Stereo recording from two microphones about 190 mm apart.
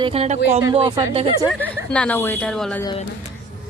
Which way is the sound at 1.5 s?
5° left (ahead or behind).